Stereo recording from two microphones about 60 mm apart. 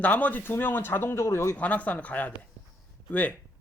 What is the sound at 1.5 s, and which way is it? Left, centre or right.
Speech, left.